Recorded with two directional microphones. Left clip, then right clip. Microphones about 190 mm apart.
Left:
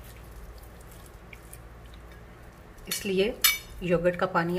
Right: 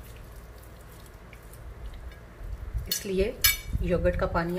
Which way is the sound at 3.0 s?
15° left (ahead or behind).